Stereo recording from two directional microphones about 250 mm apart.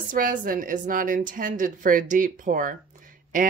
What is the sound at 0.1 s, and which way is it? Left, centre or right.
A woman's voice, right.